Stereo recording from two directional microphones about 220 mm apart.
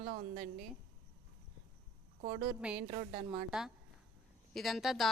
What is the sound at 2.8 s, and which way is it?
Speech, 30° right (ahead or behind).